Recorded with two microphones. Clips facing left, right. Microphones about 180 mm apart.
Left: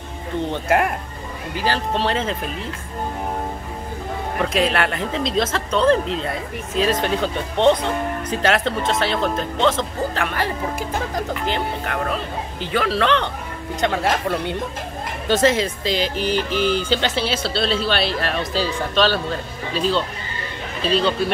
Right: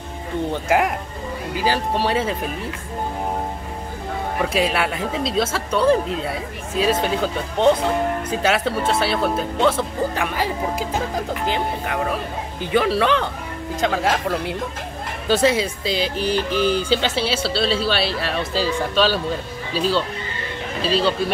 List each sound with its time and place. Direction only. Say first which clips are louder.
0.5 s speech: even; 10° right (ahead or behind)
4.4 s speech: left 1 dB; 10° right (ahead or behind)
16.2 s music: even; 35° right (ahead or behind)
16.9 s speech: right 1 dB; 5° right (ahead or behind)